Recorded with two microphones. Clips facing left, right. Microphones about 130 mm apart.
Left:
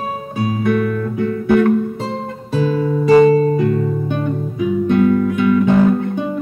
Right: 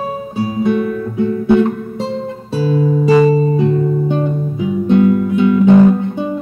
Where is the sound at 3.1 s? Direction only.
Centre (ahead or behind).